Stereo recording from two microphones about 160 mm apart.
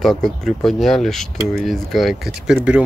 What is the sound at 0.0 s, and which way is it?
Speech, centre (ahead or behind).